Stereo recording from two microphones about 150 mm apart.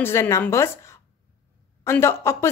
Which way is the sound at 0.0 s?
15° left (ahead or behind).